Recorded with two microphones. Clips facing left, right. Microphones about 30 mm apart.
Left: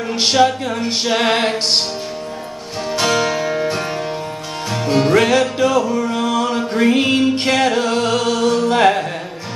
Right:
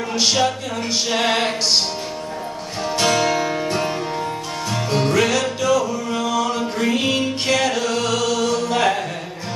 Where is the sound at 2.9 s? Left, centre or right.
Centre; by 6.0 s left.